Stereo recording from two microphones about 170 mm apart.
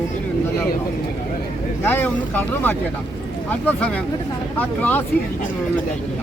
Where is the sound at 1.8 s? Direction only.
10° left (ahead or behind).